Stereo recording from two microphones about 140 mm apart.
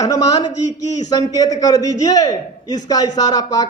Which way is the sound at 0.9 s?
55° left (ahead or behind).